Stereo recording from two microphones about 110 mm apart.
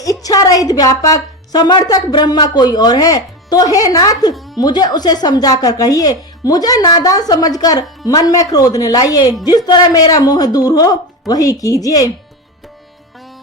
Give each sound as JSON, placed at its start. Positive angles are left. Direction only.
{"t": 0.0, "sound": "a woman's voice", "side_deg": 35}